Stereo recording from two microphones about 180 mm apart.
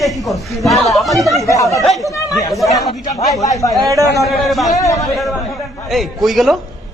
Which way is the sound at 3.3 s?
20° left (ahead or behind).